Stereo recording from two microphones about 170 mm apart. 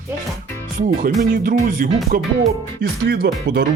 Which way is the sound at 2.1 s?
55° right (ahead or behind).